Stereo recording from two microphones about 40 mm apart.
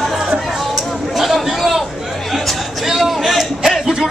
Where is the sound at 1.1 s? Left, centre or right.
Centre.